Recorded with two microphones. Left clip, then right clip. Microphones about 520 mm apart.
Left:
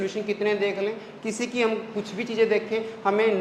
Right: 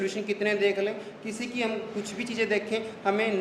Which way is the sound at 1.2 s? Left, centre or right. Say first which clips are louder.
Left 7 dB; left.